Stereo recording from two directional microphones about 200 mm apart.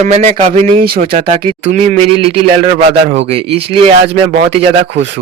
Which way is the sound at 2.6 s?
35° right (ahead or behind).